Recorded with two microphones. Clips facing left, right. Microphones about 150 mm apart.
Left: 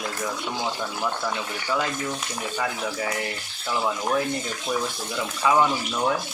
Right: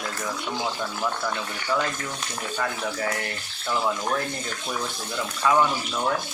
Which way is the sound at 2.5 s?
5° left (ahead or behind).